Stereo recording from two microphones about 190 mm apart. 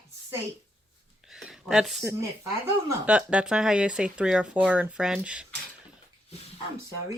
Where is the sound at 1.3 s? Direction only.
Centre (ahead or behind).